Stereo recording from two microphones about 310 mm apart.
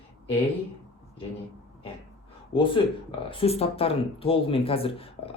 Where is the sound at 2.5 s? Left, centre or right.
Centre.